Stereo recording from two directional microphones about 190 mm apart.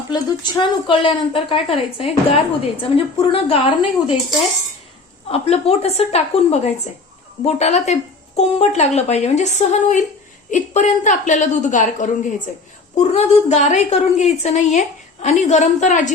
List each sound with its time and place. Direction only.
0.1 s speech: 20° left (ahead or behind)
5.3 s a woman's voice: 35° left (ahead or behind)